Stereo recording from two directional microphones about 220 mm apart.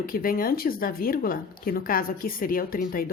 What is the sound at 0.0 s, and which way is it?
Speech, 40° left (ahead or behind).